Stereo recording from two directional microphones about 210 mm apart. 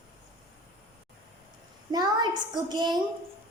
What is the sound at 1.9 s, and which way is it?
A child's voice, 20° right (ahead or behind).